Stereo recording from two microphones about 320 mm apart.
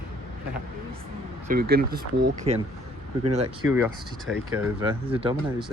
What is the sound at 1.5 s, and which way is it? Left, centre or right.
Speech, right.